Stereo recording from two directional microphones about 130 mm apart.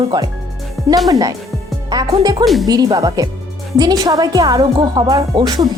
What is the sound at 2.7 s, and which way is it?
A child's voice, 30° right (ahead or behind).